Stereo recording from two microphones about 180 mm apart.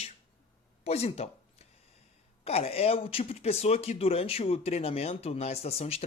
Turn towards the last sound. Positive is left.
turn(degrees=35)  # may be behind; listen again after turning